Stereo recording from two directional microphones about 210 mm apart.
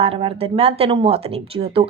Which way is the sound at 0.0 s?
25° right (ahead or behind).